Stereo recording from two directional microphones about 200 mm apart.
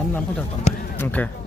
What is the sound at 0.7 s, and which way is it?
Run, 35° left (ahead or behind).